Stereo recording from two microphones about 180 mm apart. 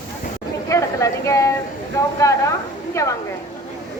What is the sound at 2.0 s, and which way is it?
Speech, 15° left (ahead or behind).